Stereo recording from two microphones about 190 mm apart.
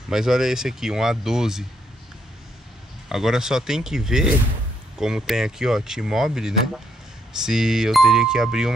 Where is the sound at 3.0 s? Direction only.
Centre (ahead or behind).